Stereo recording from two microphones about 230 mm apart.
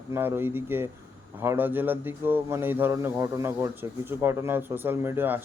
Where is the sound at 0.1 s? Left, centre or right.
Centre.